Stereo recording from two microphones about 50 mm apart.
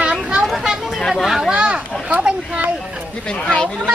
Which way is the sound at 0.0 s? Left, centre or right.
Centre.